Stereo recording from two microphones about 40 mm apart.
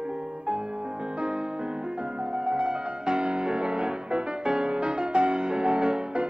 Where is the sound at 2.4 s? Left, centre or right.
Right.